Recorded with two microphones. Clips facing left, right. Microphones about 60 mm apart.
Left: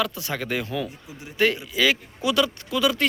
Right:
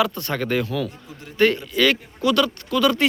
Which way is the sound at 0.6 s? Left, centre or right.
Centre.